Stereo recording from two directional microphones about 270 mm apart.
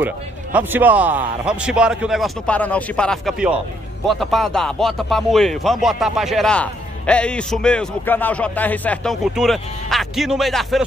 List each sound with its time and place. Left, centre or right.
0.0 s speech: centre